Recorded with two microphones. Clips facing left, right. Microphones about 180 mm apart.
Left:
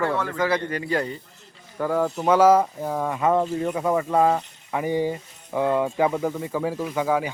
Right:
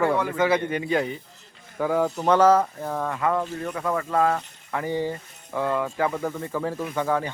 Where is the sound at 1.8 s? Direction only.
Centre (ahead or behind); by 6.1 s 20° left (ahead or behind).